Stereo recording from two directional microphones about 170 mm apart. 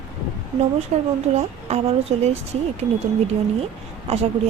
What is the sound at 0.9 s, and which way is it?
Speech, 40° right (ahead or behind).